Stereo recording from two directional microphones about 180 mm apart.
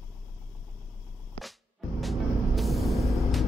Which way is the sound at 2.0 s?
Centre (ahead or behind).